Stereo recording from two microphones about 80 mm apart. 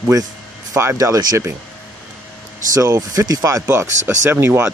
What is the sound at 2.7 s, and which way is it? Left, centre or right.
Speech, right.